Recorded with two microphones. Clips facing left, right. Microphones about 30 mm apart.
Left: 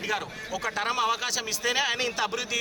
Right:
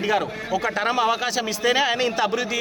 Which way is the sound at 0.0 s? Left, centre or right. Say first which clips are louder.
Right 8 dB; centre.